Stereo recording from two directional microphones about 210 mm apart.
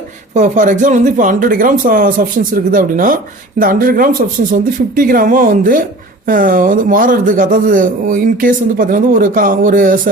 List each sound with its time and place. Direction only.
0.3 s a man's voice: 35° right (ahead or behind)